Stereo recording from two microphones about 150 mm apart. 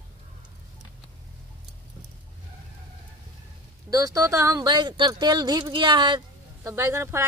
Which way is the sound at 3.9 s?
20° right (ahead or behind).